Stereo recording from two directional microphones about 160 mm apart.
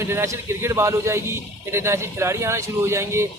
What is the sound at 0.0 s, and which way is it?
A man's voice, 15° right (ahead or behind).